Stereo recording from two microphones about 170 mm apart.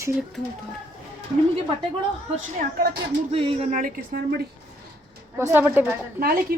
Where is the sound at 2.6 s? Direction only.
60° right (ahead or behind).